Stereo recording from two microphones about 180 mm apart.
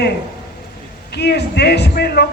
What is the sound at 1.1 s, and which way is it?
Speech, 65° left (ahead or behind).